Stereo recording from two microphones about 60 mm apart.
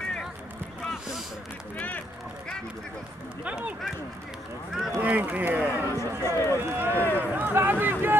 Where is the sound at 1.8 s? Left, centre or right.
Left.